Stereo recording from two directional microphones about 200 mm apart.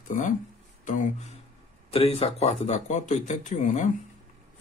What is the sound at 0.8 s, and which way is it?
Speech, 40° left (ahead or behind).